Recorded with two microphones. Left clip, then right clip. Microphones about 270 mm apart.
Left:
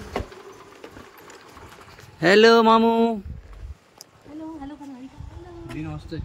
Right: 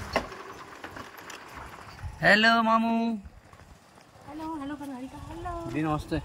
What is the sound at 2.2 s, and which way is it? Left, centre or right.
Speech, centre.